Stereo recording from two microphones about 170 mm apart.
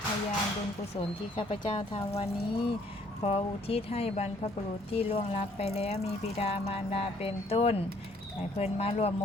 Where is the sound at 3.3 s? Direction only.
35° left (ahead or behind).